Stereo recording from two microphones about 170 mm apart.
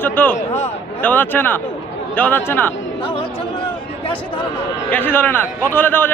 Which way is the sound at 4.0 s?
30° left (ahead or behind).